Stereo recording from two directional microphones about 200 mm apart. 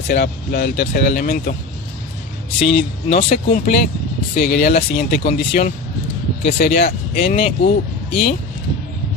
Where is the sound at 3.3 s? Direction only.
50° left (ahead or behind).